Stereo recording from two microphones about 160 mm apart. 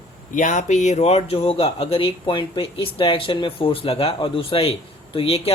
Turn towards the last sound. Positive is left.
turn(degrees=40)  # may be behind; listen again after turning